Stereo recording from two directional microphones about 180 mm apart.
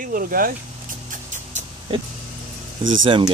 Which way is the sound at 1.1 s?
40° right (ahead or behind).